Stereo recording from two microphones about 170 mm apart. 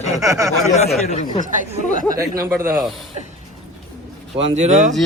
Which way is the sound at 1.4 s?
50° right (ahead or behind).